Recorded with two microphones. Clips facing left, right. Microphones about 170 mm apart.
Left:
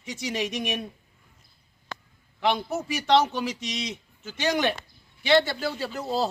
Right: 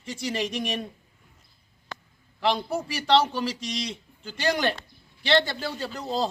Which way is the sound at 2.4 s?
10° left (ahead or behind).